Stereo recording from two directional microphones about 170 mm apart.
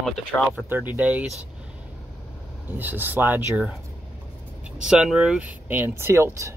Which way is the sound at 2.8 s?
10° right (ahead or behind).